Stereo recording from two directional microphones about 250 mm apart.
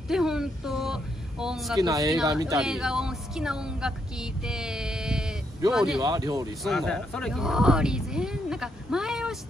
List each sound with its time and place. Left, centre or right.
0.1 s a sound: centre
1.8 s speech: centre
2.3 s speech: centre
5.9 s speech: centre
6.6 s speech: centre